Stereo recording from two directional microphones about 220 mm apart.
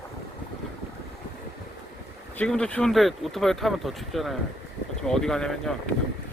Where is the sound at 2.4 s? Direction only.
5° left (ahead or behind).